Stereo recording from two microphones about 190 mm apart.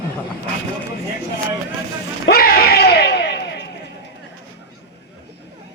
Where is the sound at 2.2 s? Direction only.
50° left (ahead or behind).